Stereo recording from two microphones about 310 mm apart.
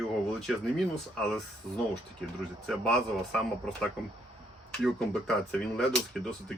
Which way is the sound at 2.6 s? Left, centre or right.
Centre.